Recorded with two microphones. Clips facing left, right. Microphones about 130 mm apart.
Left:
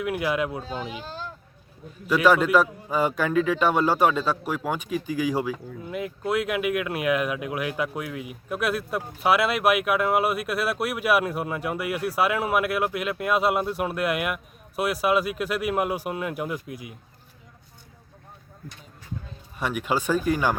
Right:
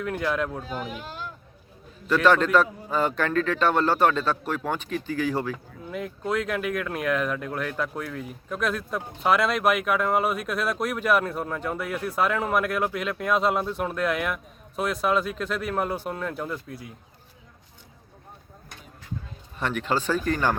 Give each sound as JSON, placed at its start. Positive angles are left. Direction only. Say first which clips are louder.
{"t": 0.0, "sound": "speech", "louder": "left 1 dB", "side_deg": 10}
{"t": 1.0, "sound": "a sound", "louder": "left 1 dB", "side_deg": 30}
{"t": 2.0, "sound": "speech", "louder": "left 1 dB", "side_deg": 10}
{"t": 19.5, "sound": "speech", "louder": "even", "side_deg": 10}